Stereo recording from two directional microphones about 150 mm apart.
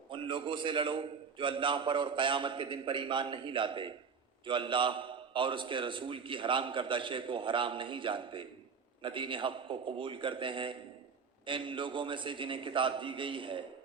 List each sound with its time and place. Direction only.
0.1 s a man's voice: 35° right (ahead or behind)